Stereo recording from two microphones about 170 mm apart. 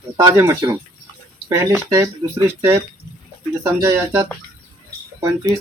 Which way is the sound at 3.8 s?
15° right (ahead or behind).